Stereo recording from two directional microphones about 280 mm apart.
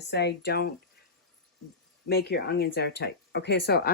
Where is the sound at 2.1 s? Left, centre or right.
Left.